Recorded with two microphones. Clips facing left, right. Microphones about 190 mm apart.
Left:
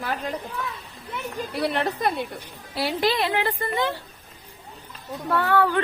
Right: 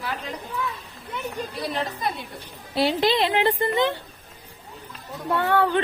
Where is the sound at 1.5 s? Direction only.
65° left (ahead or behind).